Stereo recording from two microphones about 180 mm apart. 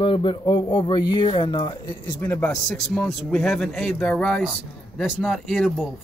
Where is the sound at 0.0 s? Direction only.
30° left (ahead or behind).